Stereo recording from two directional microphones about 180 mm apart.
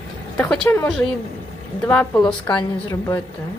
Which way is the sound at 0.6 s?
15° left (ahead or behind).